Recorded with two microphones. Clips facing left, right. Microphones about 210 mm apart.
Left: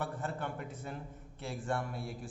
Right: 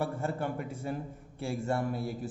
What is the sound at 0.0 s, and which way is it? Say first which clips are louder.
A man's voice: right 6 dB; 10° right (ahead or behind).